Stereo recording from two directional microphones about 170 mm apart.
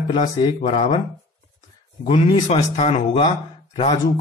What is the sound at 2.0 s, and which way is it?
A man's voice, 35° left (ahead or behind).